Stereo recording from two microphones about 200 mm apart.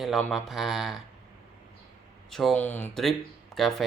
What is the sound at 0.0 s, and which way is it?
Speech, centre (ahead or behind).